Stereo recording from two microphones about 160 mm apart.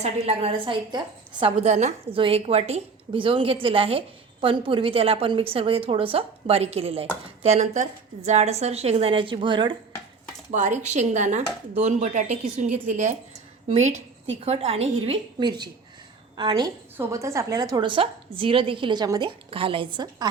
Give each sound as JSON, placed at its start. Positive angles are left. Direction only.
{"t": 0.0, "sound": "a woman's voice", "side_deg": -40}
{"t": 2.1, "sound": "a woman's voice", "side_deg": -35}
{"t": 10.5, "sound": "a woman's voice", "side_deg": -50}
{"t": 19.5, "sound": "a woman's voice", "side_deg": -35}